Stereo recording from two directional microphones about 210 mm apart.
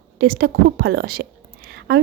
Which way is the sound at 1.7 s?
50° right (ahead or behind).